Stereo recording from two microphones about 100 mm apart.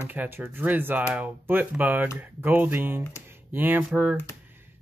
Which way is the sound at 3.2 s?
20° right (ahead or behind).